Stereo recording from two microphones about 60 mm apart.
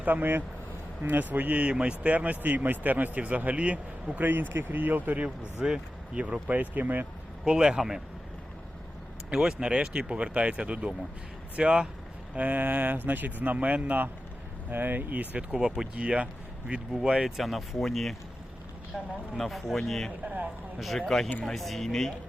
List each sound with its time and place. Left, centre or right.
0.0 s speech: right
7.4 s a man's voice: centre
9.3 s a man's voice: centre
12.3 s speech: right
15.6 s a man's voice: centre
16.0 s a man's voice: right
17.2 s speech: centre
20.2 s speech: right
20.7 s speech: centre